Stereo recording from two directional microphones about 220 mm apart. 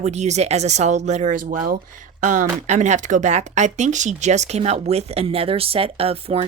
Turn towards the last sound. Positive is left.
turn(degrees=-25)  # may be behind; listen again after turning